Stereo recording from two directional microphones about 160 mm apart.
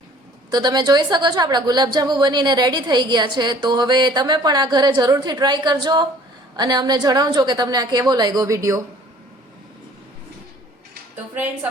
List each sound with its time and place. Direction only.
0.5 s a woman's voice: 25° right (ahead or behind)